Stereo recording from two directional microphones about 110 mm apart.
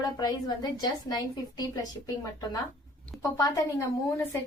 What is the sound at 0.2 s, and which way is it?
A woman's voice, 35° left (ahead or behind).